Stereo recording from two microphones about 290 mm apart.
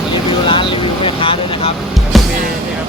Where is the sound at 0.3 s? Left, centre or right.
Centre.